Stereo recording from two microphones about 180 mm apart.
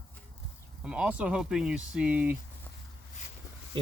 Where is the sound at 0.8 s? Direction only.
5° right (ahead or behind).